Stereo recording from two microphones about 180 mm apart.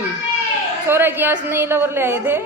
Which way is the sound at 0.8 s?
10° right (ahead or behind).